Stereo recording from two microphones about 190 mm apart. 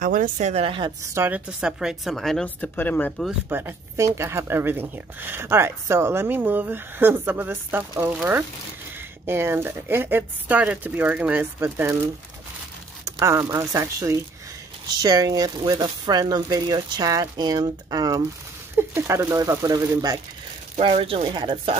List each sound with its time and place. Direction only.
0.0 s a woman's voice: 45° right (ahead or behind); by 3.3 s 5° left (ahead or behind)
3.4 s speech: 10° right (ahead or behind)
13.0 s speech: 15° right (ahead or behind)
20.7 s speech: 30° right (ahead or behind)